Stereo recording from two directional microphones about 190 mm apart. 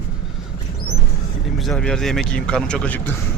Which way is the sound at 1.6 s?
5° left (ahead or behind).